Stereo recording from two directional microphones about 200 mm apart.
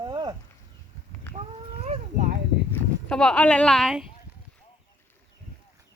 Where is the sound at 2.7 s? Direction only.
5° left (ahead or behind).